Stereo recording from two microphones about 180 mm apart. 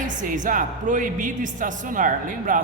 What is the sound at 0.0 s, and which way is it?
A woman's voice, 45° right (ahead or behind).